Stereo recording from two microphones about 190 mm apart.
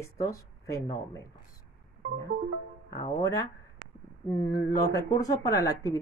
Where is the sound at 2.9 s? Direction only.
20° left (ahead or behind).